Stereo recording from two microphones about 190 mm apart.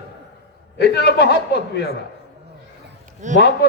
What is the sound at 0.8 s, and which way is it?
Speech, 60° left (ahead or behind).